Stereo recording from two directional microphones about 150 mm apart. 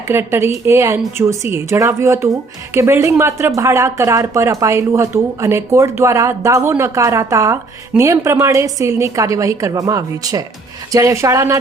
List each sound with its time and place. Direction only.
0.1 s a woman's voice: 15° right (ahead or behind)